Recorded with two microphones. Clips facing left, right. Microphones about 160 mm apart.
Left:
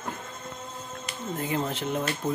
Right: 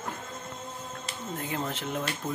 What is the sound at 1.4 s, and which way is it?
Speech, 5° left (ahead or behind).